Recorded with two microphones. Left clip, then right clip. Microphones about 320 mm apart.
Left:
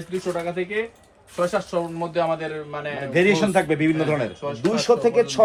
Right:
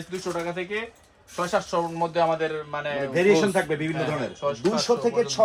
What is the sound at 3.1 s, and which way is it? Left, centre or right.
A man's voice, left.